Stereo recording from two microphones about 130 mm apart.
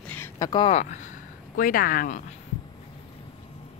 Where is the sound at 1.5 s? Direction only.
90° left.